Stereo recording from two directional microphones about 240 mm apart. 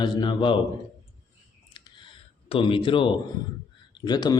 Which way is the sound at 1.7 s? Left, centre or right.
Centre.